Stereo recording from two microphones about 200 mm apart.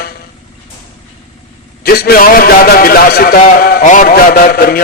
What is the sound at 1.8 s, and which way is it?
A man's voice, 50° left (ahead or behind).